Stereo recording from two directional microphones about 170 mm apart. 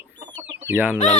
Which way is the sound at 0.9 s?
40° left (ahead or behind).